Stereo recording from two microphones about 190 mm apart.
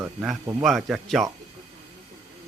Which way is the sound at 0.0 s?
5° right (ahead or behind).